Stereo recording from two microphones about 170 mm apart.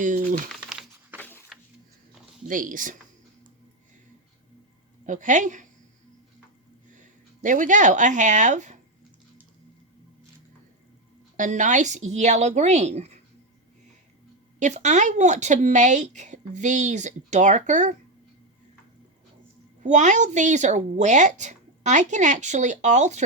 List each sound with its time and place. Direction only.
0.0 s speech: 50° right (ahead or behind)
1.2 s a sound: 10° left (ahead or behind)
2.5 s speech: 50° right (ahead or behind)
5.0 s speech: 45° right (ahead or behind)
6.9 s speech: 50° right (ahead or behind)
11.3 s speech: 50° right (ahead or behind)
14.6 s speech: 45° right (ahead or behind)
19.8 s speech: 45° right (ahead or behind)